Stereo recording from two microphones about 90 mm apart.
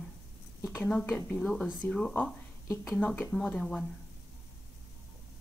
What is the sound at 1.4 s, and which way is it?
Speech, 10° left (ahead or behind).